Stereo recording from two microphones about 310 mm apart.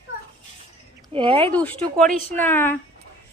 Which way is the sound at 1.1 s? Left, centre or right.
Centre.